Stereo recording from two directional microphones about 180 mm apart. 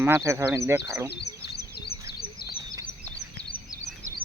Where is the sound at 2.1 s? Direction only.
55° left (ahead or behind).